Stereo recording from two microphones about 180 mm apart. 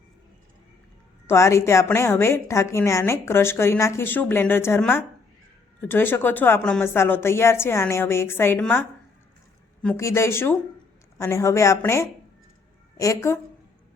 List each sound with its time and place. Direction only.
1.3 s a woman's voice: 15° left (ahead or behind)